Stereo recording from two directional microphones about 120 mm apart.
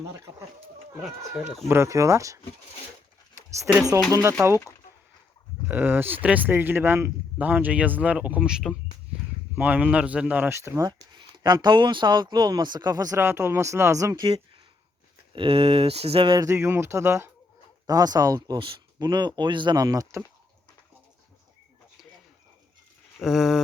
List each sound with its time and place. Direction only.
1.6 s speech: 25° right (ahead or behind)
3.7 s speech: 15° right (ahead or behind)
5.6 s speech: 15° right (ahead or behind)
10.8 s speech: 35° right (ahead or behind)
13.1 s speech: 20° right (ahead or behind)
15.4 s speech: 55° right (ahead or behind)
16.4 s speech: 20° right (ahead or behind)
17.8 s speech: 30° right (ahead or behind)
23.2 s a sound: 5° right (ahead or behind)